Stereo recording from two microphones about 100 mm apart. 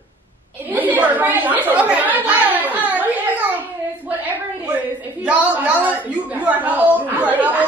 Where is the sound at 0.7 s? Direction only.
15° right (ahead or behind).